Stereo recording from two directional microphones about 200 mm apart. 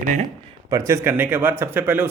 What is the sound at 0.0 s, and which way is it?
Speech, 40° right (ahead or behind).